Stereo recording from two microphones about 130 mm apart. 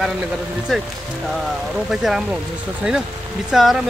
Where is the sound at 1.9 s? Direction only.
5° right (ahead or behind).